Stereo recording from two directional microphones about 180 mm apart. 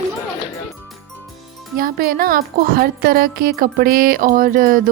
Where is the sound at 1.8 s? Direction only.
55° right (ahead or behind).